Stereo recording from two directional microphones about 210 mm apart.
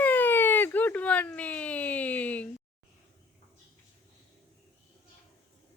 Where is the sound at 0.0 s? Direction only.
10° left (ahead or behind).